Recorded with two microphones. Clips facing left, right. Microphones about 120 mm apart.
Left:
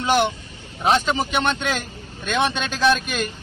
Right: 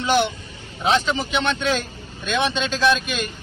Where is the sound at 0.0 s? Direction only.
50° left (ahead or behind).